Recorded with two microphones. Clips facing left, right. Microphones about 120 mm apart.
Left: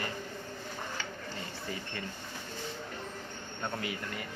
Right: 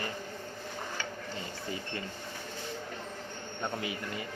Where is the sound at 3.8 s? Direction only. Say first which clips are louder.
Right 1 dB; 20° right (ahead or behind).